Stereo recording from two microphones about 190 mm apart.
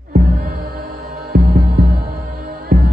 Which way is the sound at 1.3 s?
55° right (ahead or behind).